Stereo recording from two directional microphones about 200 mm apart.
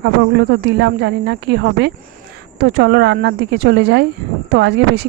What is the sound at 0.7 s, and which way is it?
Speech, 55° right (ahead or behind).